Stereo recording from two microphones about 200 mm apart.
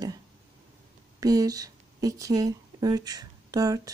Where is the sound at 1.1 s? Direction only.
15° right (ahead or behind).